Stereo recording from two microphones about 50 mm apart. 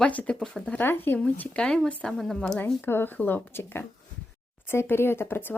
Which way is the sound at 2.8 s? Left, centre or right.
Left.